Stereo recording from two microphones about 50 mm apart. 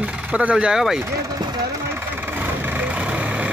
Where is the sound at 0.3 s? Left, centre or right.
Right.